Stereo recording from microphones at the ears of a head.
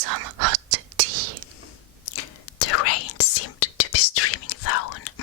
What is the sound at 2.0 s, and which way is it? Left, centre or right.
Whispering, left.